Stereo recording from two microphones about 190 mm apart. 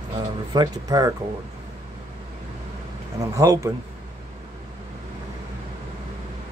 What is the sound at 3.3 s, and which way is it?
Speech, 15° right (ahead or behind).